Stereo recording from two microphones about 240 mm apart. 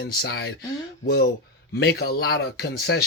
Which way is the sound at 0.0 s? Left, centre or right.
Left.